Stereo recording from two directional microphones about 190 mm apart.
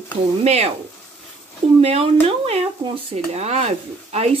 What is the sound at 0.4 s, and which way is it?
Speech, 35° right (ahead or behind).